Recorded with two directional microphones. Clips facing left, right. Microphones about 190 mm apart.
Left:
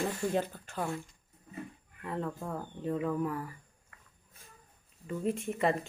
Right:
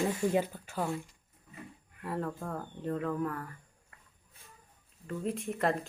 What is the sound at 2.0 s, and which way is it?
Speech, 5° right (ahead or behind).